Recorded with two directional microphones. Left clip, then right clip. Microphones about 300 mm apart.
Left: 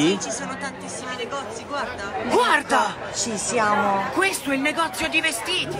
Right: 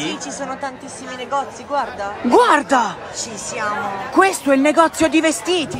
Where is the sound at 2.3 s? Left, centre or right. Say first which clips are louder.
Right 6 dB; right.